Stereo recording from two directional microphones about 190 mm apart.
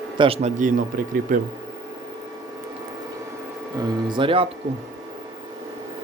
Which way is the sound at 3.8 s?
25° right (ahead or behind).